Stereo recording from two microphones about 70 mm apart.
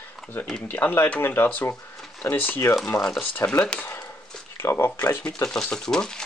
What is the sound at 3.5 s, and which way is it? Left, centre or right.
Speech, centre.